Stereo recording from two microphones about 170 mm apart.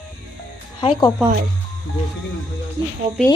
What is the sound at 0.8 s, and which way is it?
Speech, 25° left (ahead or behind).